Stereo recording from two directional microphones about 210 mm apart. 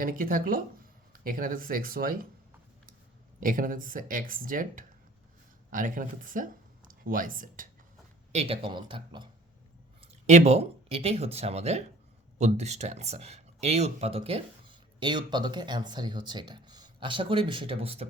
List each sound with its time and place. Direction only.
0.0 s speech: 40° right (ahead or behind)
3.4 s speech: 40° right (ahead or behind)
8.3 s speech: 30° right (ahead or behind)